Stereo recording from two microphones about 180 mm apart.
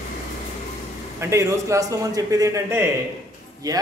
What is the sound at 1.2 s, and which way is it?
Speech, 15° right (ahead or behind).